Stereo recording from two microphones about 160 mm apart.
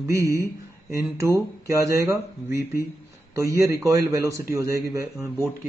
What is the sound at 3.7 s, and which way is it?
Speech, 20° right (ahead or behind).